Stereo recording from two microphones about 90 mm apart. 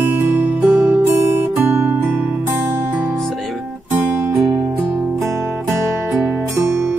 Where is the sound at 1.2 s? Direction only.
25° right (ahead or behind).